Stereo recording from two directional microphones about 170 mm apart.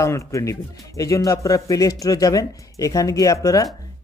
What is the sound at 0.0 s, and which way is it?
Speech, 20° left (ahead or behind).